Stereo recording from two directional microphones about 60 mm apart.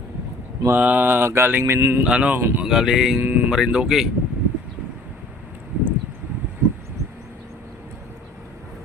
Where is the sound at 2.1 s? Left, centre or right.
Centre.